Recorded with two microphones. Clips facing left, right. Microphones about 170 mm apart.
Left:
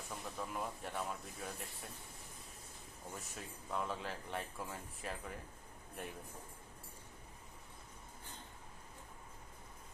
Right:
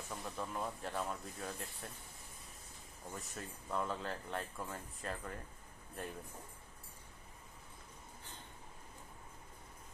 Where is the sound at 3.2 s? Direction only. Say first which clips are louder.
Right 2 dB; centre (ahead or behind).